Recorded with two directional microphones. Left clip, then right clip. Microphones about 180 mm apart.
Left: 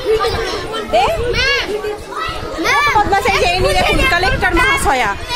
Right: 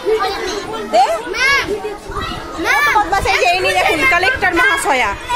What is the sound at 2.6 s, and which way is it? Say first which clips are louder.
Children playing: even; 10° left (ahead or behind).